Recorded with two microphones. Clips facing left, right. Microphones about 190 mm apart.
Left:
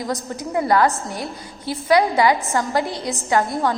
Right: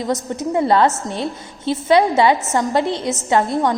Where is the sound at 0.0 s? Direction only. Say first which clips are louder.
Right 5 dB; 20° right (ahead or behind).